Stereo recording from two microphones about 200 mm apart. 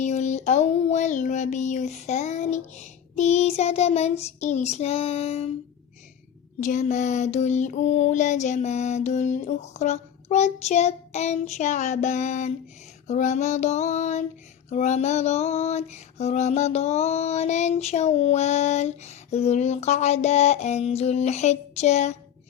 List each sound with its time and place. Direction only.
0.0 s female singing: 35° left (ahead or behind)
6.6 s female singing: 40° left (ahead or behind)